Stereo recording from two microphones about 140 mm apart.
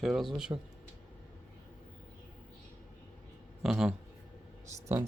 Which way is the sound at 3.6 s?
5° right (ahead or behind).